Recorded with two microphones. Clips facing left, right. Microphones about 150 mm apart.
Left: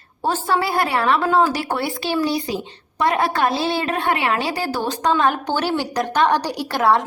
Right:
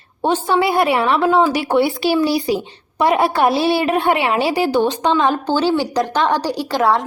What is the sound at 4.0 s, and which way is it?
Speech, 30° right (ahead or behind).